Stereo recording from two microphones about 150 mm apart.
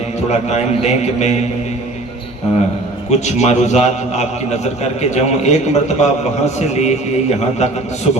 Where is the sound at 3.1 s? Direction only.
50° left (ahead or behind).